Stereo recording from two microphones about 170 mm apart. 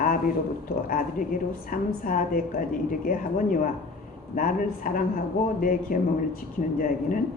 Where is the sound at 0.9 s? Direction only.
55° left (ahead or behind).